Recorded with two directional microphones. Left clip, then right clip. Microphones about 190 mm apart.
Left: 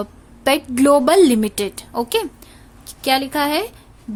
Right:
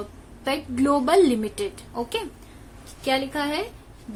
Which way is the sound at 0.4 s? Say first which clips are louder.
Left 9 dB; 50° left (ahead or behind).